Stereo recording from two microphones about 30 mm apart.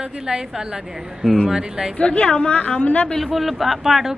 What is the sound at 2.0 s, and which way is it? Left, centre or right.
Speech, left.